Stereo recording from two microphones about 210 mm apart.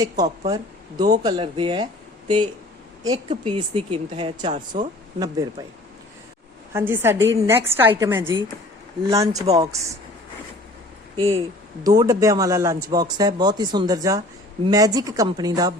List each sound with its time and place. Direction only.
0.0 s speech: 15° right (ahead or behind)
2.2 s speech: 90° right
3.0 s speech: 20° right (ahead or behind)
6.7 s speech: 10° right (ahead or behind)
9.3 s speech: 30° right (ahead or behind)
11.2 s speech: 25° right (ahead or behind)